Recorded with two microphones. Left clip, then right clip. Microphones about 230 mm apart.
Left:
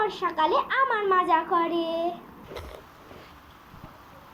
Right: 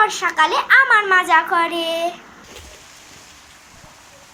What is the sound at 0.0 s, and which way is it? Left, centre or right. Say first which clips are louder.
A woman's voice: right 9 dB; right.